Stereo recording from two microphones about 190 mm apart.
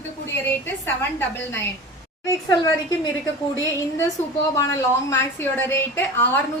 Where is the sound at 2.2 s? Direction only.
15° left (ahead or behind).